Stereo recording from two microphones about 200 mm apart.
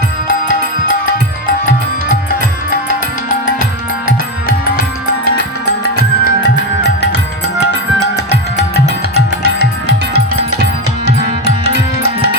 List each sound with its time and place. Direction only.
6.0 s music: 55° left (ahead or behind)
9.1 s music: 55° right (ahead or behind)